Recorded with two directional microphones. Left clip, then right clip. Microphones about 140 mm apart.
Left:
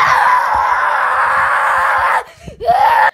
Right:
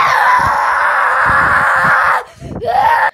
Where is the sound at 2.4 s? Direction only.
20° left (ahead or behind).